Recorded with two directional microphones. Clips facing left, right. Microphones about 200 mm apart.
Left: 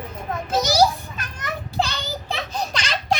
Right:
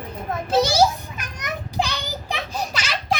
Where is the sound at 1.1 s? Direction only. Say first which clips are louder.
Even; 15° right (ahead or behind).